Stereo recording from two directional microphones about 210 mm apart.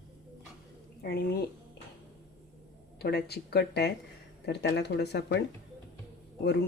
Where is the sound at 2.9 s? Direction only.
50° left (ahead or behind).